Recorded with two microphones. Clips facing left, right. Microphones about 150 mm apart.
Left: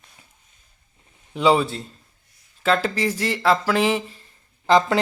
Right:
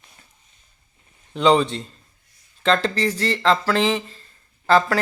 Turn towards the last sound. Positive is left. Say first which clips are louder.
# even
turn(degrees=15)  # may be behind; listen again after turning